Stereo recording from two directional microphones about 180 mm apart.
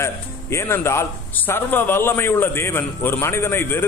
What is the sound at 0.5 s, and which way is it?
Speech, 15° left (ahead or behind).